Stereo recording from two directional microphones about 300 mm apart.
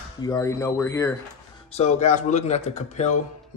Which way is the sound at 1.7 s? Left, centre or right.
Left.